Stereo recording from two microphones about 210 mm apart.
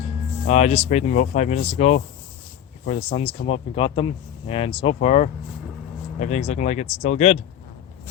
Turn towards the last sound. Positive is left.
turn(degrees=30)  # may be behind; listen again after turning